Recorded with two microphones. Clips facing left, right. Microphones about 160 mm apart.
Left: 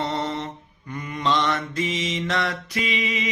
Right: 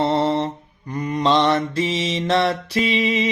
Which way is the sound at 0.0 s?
35° right (ahead or behind).